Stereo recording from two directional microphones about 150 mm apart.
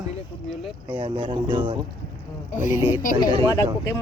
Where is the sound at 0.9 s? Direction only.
35° right (ahead or behind).